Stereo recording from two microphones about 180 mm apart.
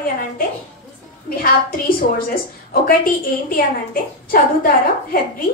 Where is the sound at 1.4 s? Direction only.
55° left (ahead or behind).